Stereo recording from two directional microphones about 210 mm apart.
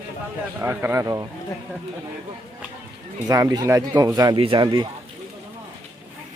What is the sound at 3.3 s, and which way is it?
Speech, 15° right (ahead or behind).